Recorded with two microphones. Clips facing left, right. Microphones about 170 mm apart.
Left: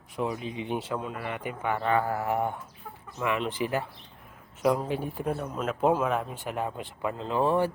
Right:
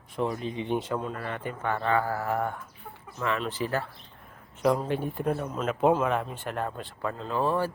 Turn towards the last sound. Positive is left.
turn(degrees=20)  # may be behind; listen again after turning